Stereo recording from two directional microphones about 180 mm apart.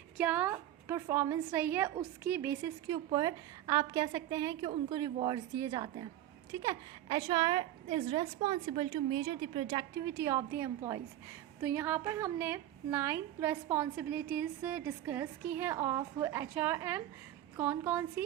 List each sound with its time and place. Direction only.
0.2 s a woman's voice: 10° right (ahead or behind)